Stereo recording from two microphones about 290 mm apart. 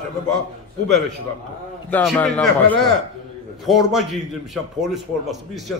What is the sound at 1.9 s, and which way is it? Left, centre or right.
A man's voice, centre.